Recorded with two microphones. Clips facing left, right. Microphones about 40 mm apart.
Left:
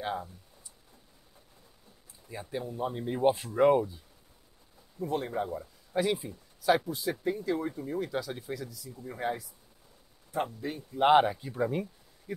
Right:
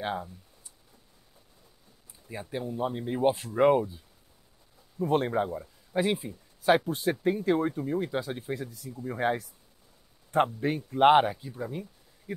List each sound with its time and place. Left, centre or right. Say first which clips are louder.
2.2 s speech: right 2 dB; centre
4.9 s speech: right 6 dB; right
5.9 s speech: right 1 dB; right
7.8 s speech: right 3 dB; right
9.2 s speech: right 5 dB; right
11.5 s speech: left 6 dB; left